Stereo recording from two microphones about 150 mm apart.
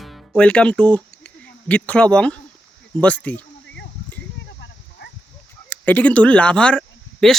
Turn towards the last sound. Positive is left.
turn(degrees=5)  # may be behind; listen again after turning